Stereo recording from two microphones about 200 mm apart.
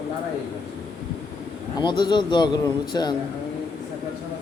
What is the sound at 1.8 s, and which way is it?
A man's voice, 20° left (ahead or behind).